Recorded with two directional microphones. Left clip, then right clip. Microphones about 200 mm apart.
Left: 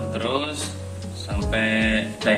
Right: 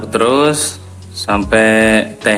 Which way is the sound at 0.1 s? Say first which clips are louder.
Right 16 dB; 50° right (ahead or behind).